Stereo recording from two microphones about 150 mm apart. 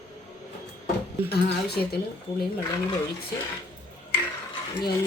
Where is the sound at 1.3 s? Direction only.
90° left.